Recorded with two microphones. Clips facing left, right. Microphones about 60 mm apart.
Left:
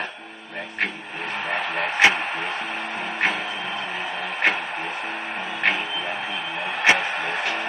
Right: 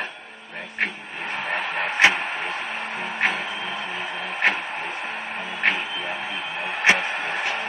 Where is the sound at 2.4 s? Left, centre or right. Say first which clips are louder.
Left 1 dB; right.